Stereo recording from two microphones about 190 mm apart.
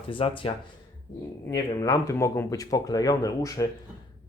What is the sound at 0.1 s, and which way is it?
Speech, 30° left (ahead or behind).